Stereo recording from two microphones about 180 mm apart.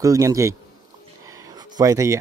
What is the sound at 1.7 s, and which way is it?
Speech, 15° right (ahead or behind).